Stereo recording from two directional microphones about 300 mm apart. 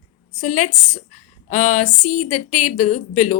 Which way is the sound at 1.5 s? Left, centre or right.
Left.